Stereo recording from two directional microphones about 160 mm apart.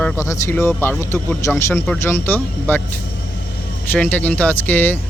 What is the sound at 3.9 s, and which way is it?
Speech, 10° left (ahead or behind).